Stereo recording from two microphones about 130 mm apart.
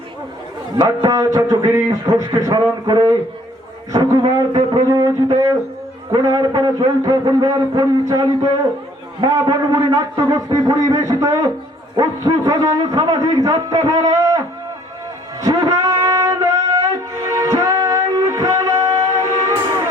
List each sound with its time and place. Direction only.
0.8 s a man's voice: 30° right (ahead or behind)
4.4 s a man's voice: 30° right (ahead or behind)
15.4 s a sound: 30° right (ahead or behind)
17.2 s music: 25° right (ahead or behind)